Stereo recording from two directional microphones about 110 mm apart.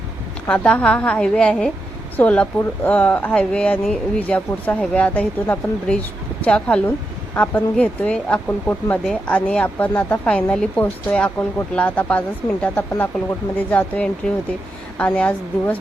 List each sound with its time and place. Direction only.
0.4 s speech: 10° left (ahead or behind)